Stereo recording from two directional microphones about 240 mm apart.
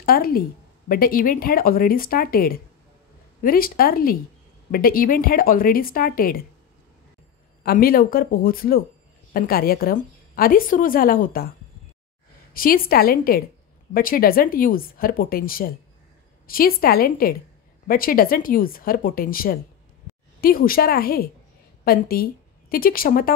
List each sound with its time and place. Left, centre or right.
0.0 s a woman's voice: left
7.6 s a woman's voice: left
12.5 s a woman's voice: left